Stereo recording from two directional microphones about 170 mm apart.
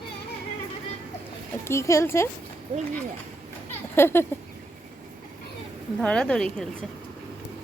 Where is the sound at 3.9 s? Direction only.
15° left (ahead or behind).